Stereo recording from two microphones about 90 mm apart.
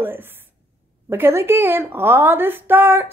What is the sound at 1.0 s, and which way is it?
A woman's voice, 25° right (ahead or behind).